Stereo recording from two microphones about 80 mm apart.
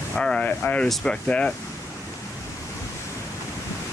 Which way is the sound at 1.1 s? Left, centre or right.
Centre.